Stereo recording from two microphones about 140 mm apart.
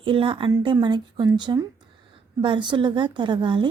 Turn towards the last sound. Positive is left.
turn(degrees=-35)  # may be behind; listen again after turning